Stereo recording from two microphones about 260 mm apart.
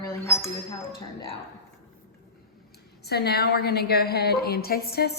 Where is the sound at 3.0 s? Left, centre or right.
Left.